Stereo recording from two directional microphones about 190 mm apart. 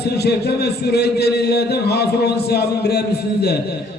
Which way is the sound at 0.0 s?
60° left (ahead or behind).